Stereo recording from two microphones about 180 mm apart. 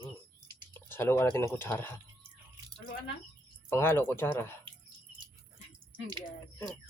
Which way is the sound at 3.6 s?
15° left (ahead or behind).